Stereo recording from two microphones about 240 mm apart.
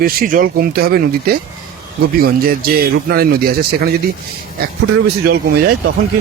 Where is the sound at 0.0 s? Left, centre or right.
Right.